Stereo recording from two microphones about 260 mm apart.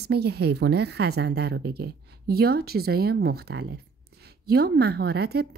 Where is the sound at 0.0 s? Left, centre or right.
Right.